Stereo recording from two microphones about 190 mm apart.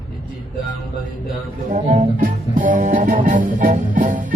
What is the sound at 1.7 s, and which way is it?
Music, 40° right (ahead or behind).